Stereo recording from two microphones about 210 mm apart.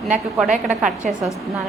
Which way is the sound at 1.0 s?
40° right (ahead or behind).